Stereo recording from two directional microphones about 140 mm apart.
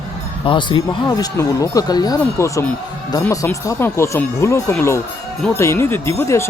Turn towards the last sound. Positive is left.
turn(degrees=20)  # may be behind; listen again after turning